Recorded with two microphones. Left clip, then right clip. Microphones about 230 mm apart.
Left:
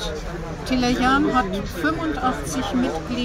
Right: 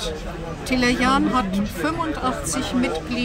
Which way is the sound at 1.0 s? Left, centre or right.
Centre.